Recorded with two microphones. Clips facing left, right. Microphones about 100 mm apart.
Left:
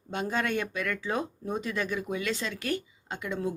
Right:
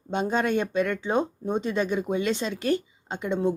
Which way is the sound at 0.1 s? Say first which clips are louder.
Right 5 dB; 25° right (ahead or behind).